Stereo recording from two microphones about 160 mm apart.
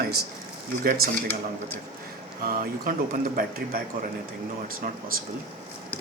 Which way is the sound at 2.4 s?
65° right (ahead or behind).